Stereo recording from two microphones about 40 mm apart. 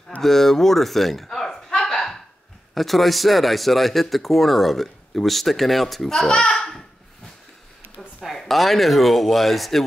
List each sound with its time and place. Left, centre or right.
0.2 s a sound: centre
2.7 s speech: centre
6.4 s a child's voice: left
8.4 s speech: centre